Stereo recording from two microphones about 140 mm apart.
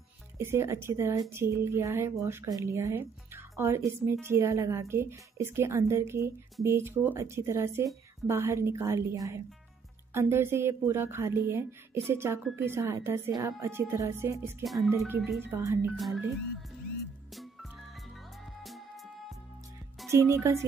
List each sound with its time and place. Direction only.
0.4 s a woman's voice: 20° right (ahead or behind)
18.4 s music: centre (ahead or behind)
20.1 s speech: 20° right (ahead or behind)